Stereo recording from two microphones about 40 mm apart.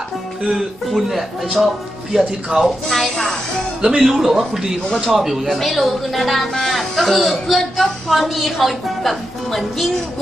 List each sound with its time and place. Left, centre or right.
0.5 s speech: centre
2.1 s speech: centre
2.6 s speech: centre
3.8 s speech: centre
4.1 s speech: centre